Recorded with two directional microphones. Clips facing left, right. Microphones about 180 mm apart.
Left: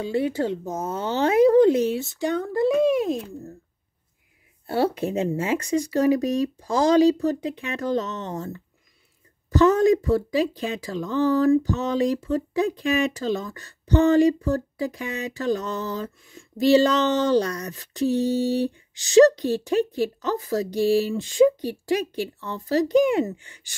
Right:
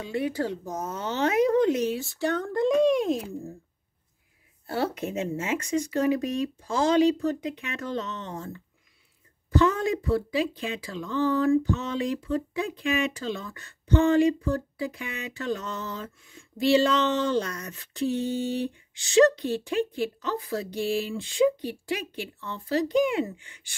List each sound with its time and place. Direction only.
0.0 s speech: 30° left (ahead or behind); by 3.3 s centre (ahead or behind)
4.6 s speech: 30° left (ahead or behind)